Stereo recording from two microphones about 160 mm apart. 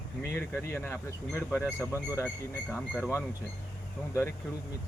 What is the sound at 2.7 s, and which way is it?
Speech, 15° left (ahead or behind).